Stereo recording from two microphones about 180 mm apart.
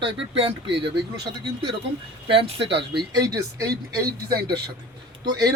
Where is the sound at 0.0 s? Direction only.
30° right (ahead or behind).